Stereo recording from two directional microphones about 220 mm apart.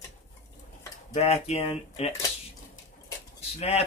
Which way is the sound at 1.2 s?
30° left (ahead or behind).